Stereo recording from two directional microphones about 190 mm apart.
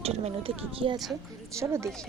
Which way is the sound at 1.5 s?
15° right (ahead or behind).